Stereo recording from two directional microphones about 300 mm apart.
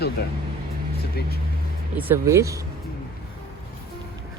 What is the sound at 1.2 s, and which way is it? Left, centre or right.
Speech, left.